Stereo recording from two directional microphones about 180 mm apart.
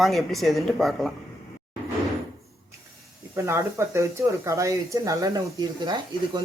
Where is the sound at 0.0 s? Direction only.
Centre (ahead or behind).